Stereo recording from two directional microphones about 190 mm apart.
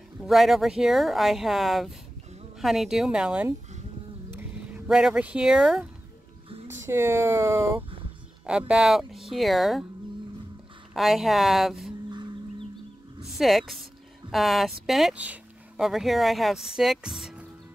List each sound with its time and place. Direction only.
0.2 s speech: centre (ahead or behind)
6.9 s speech: 10° right (ahead or behind)
10.9 s speech: centre (ahead or behind)
12.1 s livestock: 25° right (ahead or behind)
13.4 s speech: centre (ahead or behind)